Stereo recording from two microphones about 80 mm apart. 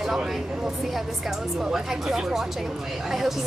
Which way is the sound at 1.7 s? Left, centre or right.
Centre.